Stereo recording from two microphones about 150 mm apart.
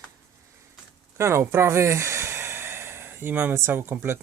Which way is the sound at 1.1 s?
20° right (ahead or behind).